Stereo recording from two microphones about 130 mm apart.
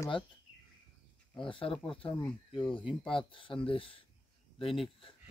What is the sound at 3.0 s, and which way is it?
Speech, 40° left (ahead or behind).